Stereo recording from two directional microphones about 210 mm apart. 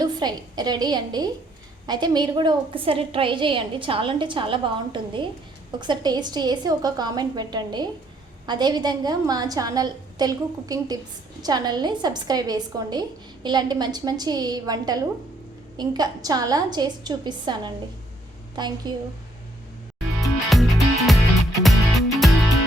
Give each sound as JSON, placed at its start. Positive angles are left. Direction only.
{"t": 0.0, "sound": "a woman's voice", "side_deg": -20}
{"t": 18.8, "sound": "a woman's voice", "side_deg": -20}
{"t": 20.2, "sound": "music", "side_deg": 0}